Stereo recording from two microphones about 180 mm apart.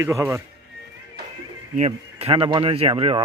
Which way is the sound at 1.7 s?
35° right (ahead or behind).